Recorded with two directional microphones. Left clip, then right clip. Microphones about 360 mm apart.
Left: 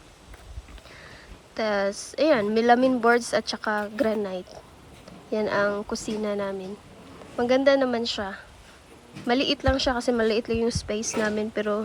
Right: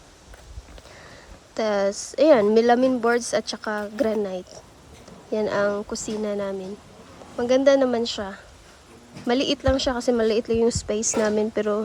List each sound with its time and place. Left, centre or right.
1.5 s speech: centre